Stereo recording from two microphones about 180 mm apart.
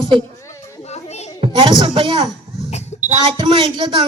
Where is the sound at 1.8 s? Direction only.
30° right (ahead or behind).